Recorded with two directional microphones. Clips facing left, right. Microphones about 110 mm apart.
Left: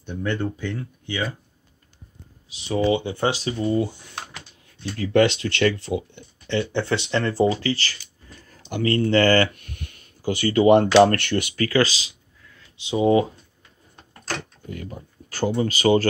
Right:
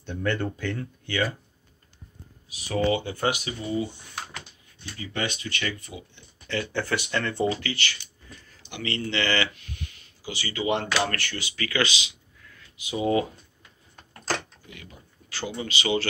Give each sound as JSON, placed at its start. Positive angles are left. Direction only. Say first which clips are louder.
{"t": 0.0, "sound": "speech", "louder": "left 2 dB", "side_deg": 15}
{"t": 2.5, "sound": "speech", "louder": "left 3 dB", "side_deg": 25}
{"t": 3.6, "sound": "speech", "louder": "left 6 dB", "side_deg": 60}
{"t": 4.9, "sound": "speech", "louder": "left 13 dB", "side_deg": 80}
{"t": 6.4, "sound": "speech", "louder": "left 5 dB", "side_deg": 25}
{"t": 11.1, "sound": "speech", "louder": "left 10 dB", "side_deg": 60}
{"t": 11.5, "sound": "speech", "louder": "left 5 dB", "side_deg": 40}
{"t": 14.7, "sound": "speech", "louder": "left 11 dB", "side_deg": 45}